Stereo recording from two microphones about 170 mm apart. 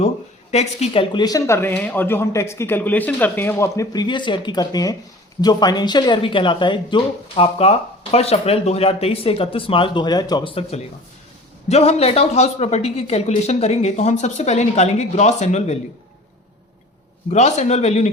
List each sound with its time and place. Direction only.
0.5 s speech: 40° left (ahead or behind)
1.1 s speech: 20° left (ahead or behind); by 15.8 s 40° left (ahead or behind)
17.3 s speech: 40° left (ahead or behind)